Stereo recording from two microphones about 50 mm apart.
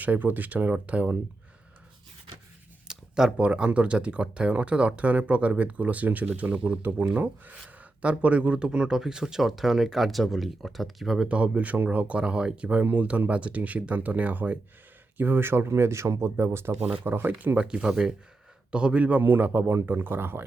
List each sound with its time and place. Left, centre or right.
0.0 s speech: right
2.8 s a sound: centre
3.3 s speech: right; by 11.3 s centre
11.3 s speech: right
15.2 s speech: right
16.8 s speech: right
19.2 s speech: right